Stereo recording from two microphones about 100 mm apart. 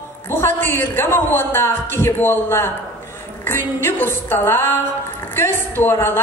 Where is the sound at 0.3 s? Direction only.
25° left (ahead or behind).